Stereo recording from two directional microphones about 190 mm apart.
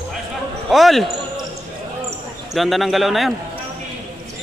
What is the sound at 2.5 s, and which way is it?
Speech, centre (ahead or behind).